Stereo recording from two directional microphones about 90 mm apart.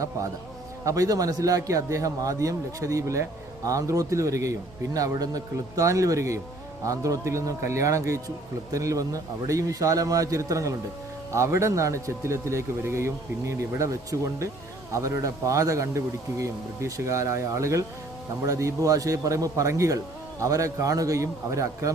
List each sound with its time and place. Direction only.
0.9 s a man's voice: 40° right (ahead or behind)